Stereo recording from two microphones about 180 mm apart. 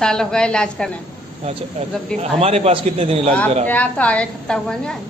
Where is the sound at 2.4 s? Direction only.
35° right (ahead or behind).